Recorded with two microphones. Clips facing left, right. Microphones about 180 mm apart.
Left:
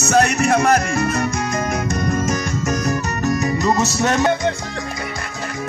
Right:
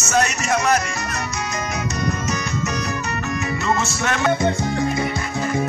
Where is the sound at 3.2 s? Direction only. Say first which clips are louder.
Left 6 dB; 40° left (ahead or behind).